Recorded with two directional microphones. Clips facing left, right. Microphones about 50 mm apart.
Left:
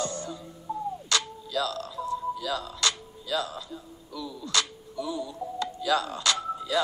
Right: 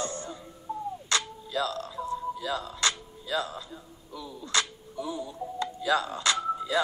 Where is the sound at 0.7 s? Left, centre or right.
Centre.